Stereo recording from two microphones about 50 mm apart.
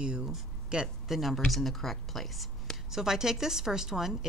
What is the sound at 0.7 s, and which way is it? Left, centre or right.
Speech, right.